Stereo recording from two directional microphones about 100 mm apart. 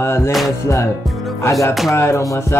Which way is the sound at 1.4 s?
30° left (ahead or behind).